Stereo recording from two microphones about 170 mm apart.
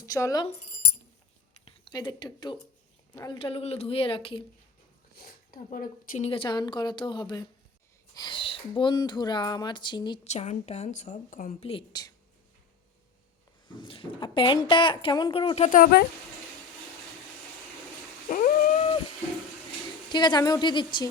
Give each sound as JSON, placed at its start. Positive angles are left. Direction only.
{"t": 0.0, "sound": "speech", "side_deg": 20}
{"t": 1.6, "sound": "a woman's voice", "side_deg": 25}
{"t": 5.1, "sound": "speech", "side_deg": 60}
{"t": 6.2, "sound": "speech", "side_deg": 30}
{"t": 10.2, "sound": "a woman's voice", "side_deg": 40}
{"t": 11.6, "sound": "speech", "side_deg": 30}
{"t": 13.7, "sound": "a woman's voice", "side_deg": 30}
{"t": 18.3, "sound": "dog", "side_deg": 50}
{"t": 20.1, "sound": "speech", "side_deg": 25}